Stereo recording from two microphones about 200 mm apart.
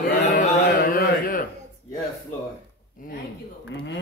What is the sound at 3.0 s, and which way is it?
Speech, 45° left (ahead or behind).